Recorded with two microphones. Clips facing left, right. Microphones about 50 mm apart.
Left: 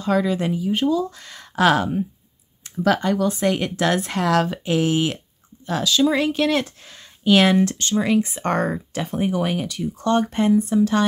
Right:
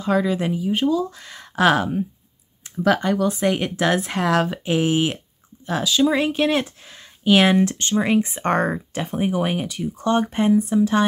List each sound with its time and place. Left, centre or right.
0.0 s speech: centre
8.9 s speech: centre